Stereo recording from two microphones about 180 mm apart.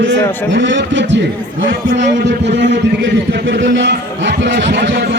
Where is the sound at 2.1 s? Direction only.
75° right (ahead or behind).